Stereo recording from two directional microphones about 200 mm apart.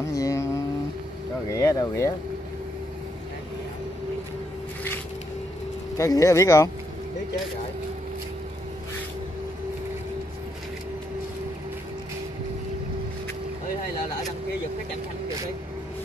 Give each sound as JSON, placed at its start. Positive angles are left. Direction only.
{"t": 0.0, "sound": "a sound", "side_deg": 15}
{"t": 1.5, "sound": "speech", "side_deg": 15}
{"t": 5.9, "sound": "speech", "side_deg": 15}